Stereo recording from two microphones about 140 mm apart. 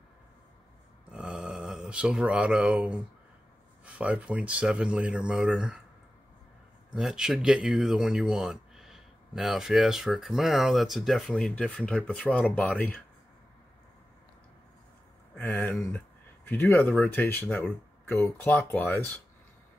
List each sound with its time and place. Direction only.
1.1 s a sound: 5° right (ahead or behind)
3.8 s speech: 10° right (ahead or behind)
6.9 s speech: 5° right (ahead or behind); by 13.0 s 10° left (ahead or behind)
16.4 s speech: 15° left (ahead or behind)